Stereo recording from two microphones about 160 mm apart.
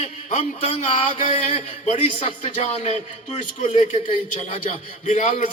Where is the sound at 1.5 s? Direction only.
45° left (ahead or behind).